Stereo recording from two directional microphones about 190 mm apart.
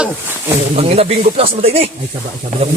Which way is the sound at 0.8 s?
30° right (ahead or behind).